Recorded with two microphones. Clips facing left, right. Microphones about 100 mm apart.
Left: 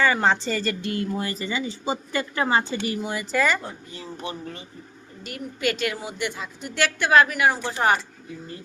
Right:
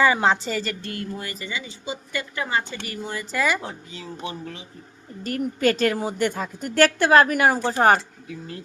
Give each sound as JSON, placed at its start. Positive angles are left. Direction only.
{"t": 0.0, "sound": "a woman's voice", "side_deg": -5}
{"t": 0.8, "sound": "a woman's voice", "side_deg": 25}
{"t": 2.9, "sound": "speech", "side_deg": 10}
{"t": 3.3, "sound": "a woman's voice", "side_deg": -5}
{"t": 5.5, "sound": "a woman's voice", "side_deg": -40}